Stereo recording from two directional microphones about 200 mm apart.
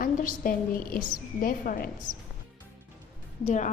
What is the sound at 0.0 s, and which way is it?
A woman's voice, 45° left (ahead or behind).